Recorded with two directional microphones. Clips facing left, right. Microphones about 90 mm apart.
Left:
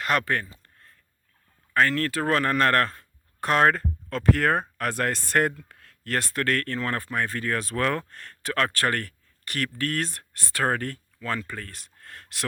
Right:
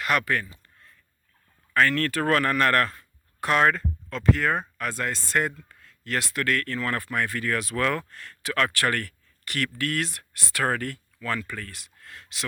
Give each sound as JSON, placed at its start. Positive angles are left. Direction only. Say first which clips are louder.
{"t": 0.0, "sound": "speech", "louder": "even", "side_deg": 40}
{"t": 0.6, "sound": "a sound", "louder": "even", "side_deg": 50}
{"t": 1.7, "sound": "speech", "louder": "even", "side_deg": 25}
{"t": 6.1, "sound": "speech", "louder": "left 1 dB", "side_deg": 40}